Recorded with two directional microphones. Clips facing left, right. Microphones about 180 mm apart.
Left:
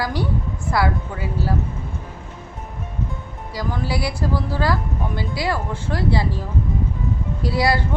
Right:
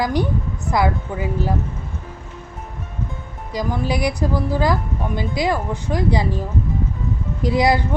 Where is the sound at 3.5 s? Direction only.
20° right (ahead or behind).